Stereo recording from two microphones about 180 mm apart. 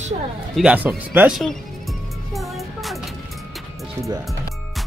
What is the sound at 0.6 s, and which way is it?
Speech, 5° right (ahead or behind).